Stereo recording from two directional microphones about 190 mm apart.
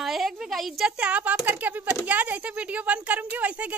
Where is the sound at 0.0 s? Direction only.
Centre (ahead or behind).